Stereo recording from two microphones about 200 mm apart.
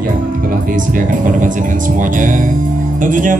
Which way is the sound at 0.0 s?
45° right (ahead or behind).